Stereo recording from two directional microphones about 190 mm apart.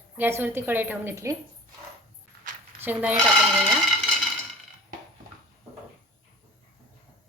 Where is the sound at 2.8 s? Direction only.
10° right (ahead or behind).